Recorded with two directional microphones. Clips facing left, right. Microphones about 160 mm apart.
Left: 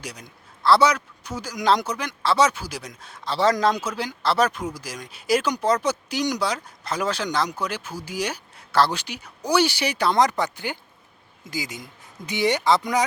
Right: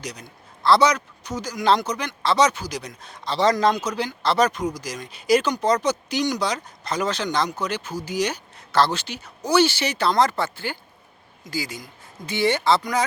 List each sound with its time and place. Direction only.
0.0 s speech: 5° left (ahead or behind)